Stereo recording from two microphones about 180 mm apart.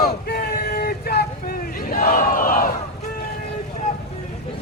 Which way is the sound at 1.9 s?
55° left (ahead or behind).